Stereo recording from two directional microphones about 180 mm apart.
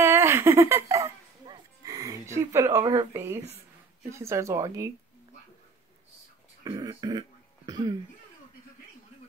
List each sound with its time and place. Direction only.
0.0 s giggle: 15° right (ahead or behind)
3.1 s speech: 15° right (ahead or behind)
6.6 s speech: 20° right (ahead or behind)